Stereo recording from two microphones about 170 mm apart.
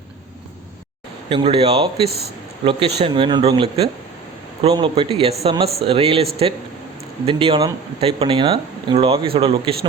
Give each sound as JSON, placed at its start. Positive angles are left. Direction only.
{"t": 1.3, "sound": "speech", "side_deg": -30}
{"t": 2.0, "sound": "speech", "side_deg": -70}
{"t": 2.6, "sound": "speech", "side_deg": -30}
{"t": 7.3, "sound": "speech", "side_deg": -30}